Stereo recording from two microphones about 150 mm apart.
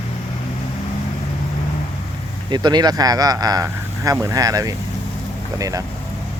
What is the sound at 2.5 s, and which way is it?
Speech, 30° right (ahead or behind).